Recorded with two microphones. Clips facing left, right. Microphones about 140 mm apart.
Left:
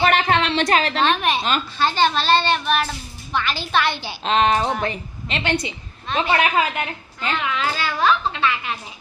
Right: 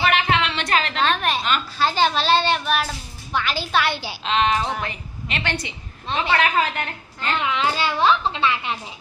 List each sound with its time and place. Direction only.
0.0 s a sound: 40° left (ahead or behind)
1.0 s a woman's voice: centre (ahead or behind)
1.4 s a woman's voice: 35° left (ahead or behind)
1.8 s a child's voice: 10° right (ahead or behind)
4.2 s a woman's voice: 40° left (ahead or behind)
5.4 s a woman's voice: 20° left (ahead or behind)
7.5 s a child's voice: 25° right (ahead or behind)